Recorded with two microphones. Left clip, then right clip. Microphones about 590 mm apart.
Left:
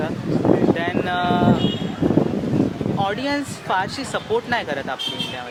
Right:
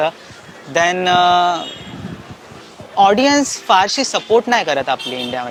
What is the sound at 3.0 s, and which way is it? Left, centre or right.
Speech, right.